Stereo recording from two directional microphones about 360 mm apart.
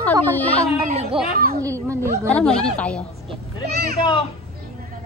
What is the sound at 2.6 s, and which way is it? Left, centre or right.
Speech, centre.